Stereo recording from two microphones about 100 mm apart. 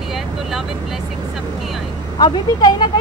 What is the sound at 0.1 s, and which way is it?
Vehicle, 5° right (ahead or behind).